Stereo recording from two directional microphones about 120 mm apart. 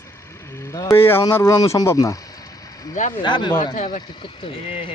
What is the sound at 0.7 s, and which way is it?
Speech, 25° left (ahead or behind).